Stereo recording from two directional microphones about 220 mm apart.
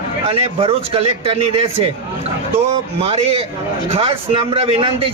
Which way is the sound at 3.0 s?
25° right (ahead or behind).